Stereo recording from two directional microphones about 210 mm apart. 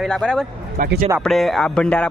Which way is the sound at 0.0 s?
5° left (ahead or behind).